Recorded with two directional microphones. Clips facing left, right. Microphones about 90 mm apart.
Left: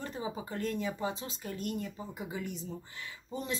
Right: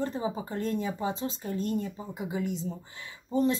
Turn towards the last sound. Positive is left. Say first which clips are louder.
# right 11 dB
turn(degrees=-35)  # may be behind; listen again after turning